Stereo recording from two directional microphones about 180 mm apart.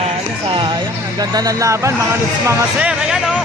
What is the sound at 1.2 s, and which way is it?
Speech, 20° right (ahead or behind).